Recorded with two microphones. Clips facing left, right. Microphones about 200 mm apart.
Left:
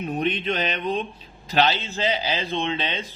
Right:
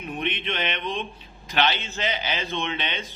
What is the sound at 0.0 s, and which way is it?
A man's voice, 40° left (ahead or behind).